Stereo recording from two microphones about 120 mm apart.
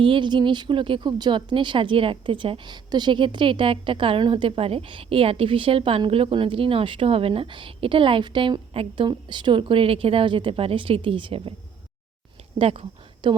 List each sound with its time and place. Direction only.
0.0 s speech: 40° right (ahead or behind)
12.5 s speech: 55° right (ahead or behind)
13.2 s speech: 40° right (ahead or behind)